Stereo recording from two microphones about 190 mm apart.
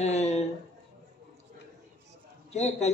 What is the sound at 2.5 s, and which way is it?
Speech, 35° left (ahead or behind).